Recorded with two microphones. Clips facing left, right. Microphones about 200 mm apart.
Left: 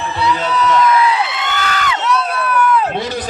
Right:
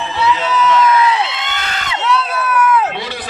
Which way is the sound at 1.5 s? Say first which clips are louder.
Left 4 dB; 25° right (ahead or behind).